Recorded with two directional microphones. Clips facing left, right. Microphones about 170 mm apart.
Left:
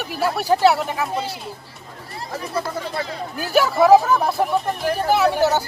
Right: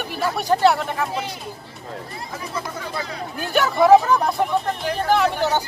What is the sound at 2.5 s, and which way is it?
Speech, 30° left (ahead or behind).